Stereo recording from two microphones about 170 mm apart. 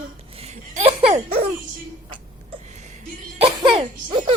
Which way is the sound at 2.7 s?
45° right (ahead or behind).